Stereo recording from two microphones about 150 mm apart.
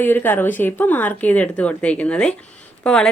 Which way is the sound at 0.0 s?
15° left (ahead or behind).